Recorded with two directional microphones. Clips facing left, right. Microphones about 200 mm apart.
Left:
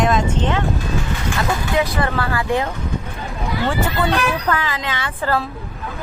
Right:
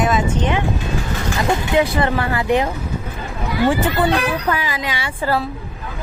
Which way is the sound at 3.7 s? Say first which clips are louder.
Right 3 dB; 15° right (ahead or behind).